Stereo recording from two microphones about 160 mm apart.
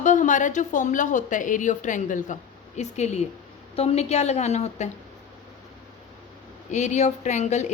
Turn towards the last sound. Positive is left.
turn(degrees=45)  # may be behind; listen again after turning